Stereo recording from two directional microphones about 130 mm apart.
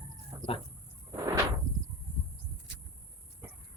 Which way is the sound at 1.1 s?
25° right (ahead or behind).